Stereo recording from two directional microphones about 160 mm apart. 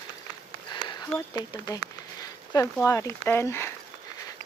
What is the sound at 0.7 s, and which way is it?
Speech, 25° left (ahead or behind).